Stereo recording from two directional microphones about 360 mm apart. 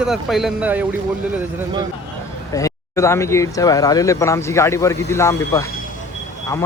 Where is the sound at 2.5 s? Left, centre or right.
Centre.